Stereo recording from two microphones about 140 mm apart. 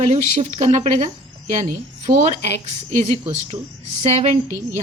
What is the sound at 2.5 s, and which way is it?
A woman's voice, 55° right (ahead or behind).